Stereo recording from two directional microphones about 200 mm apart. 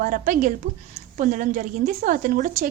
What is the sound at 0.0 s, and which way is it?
A woman's voice, 40° right (ahead or behind).